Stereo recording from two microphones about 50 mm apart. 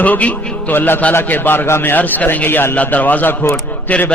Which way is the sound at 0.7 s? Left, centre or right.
Left.